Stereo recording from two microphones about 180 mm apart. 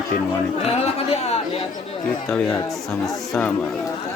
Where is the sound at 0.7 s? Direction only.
35° left (ahead or behind).